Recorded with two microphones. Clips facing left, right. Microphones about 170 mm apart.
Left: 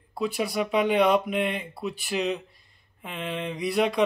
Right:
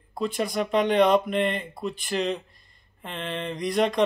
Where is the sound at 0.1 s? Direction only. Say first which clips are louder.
Even; 5° left (ahead or behind).